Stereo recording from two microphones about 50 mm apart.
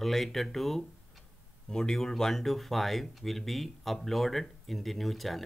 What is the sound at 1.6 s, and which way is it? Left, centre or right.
Speech, centre.